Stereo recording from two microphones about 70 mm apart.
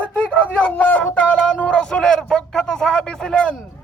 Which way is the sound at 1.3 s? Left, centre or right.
Centre.